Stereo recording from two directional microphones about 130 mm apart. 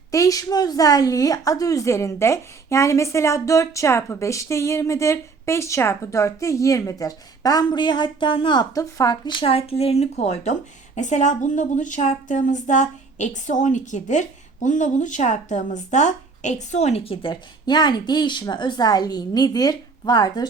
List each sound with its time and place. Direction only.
0.1 s a woman's voice: 25° left (ahead or behind)
8.7 s speech: 25° left (ahead or behind)